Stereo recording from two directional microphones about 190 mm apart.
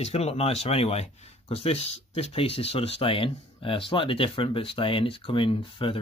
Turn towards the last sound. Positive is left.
turn(degrees=30)  # may be behind; listen again after turning